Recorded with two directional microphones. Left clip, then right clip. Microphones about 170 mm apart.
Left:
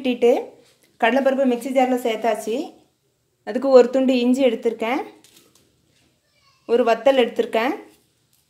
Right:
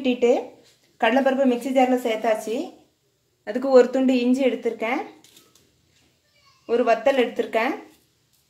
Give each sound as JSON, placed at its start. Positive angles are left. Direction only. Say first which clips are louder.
{"t": 0.0, "sound": "speech", "louder": "left 2 dB", "side_deg": 15}
{"t": 0.9, "sound": "a woman's voice", "louder": "left 2 dB", "side_deg": 30}
{"t": 3.4, "sound": "a woman's voice", "louder": "left 3 dB", "side_deg": 30}
{"t": 6.6, "sound": "speech", "louder": "left 3 dB", "side_deg": 55}